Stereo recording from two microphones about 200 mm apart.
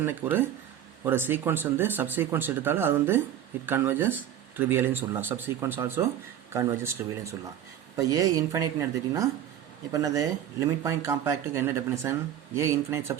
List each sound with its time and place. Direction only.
0.0 s speech: 10° right (ahead or behind)